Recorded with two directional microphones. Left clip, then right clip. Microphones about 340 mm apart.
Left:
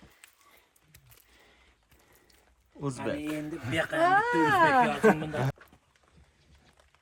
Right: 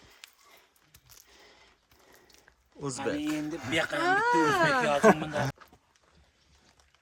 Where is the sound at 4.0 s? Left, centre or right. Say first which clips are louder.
Left 2 dB; centre.